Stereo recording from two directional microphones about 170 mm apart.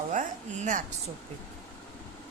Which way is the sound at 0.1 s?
45° right (ahead or behind).